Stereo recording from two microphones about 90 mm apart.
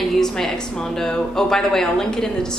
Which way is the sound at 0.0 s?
5° left (ahead or behind).